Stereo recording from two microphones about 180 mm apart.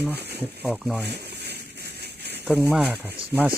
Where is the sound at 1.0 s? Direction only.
65° right (ahead or behind).